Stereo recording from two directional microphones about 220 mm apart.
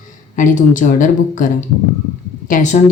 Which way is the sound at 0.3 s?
35° left (ahead or behind).